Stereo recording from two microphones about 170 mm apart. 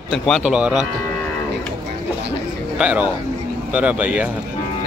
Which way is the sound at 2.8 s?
10° right (ahead or behind).